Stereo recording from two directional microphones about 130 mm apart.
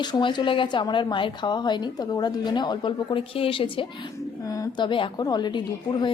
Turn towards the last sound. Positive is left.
turn(degrees=35)  # may be behind; listen again after turning